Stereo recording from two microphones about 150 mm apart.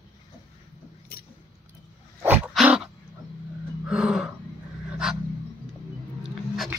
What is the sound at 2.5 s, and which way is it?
Dog, 5° right (ahead or behind).